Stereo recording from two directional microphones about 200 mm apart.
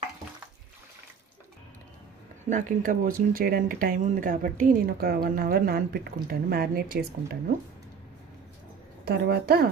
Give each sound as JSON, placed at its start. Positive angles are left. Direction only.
{"t": 2.5, "sound": "speech", "side_deg": -40}
{"t": 9.0, "sound": "speech", "side_deg": -55}